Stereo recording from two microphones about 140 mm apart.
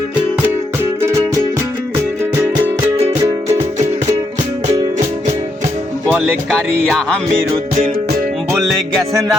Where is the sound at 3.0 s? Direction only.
25° right (ahead or behind).